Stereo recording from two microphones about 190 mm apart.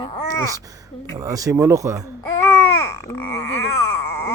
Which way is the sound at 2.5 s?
15° left (ahead or behind).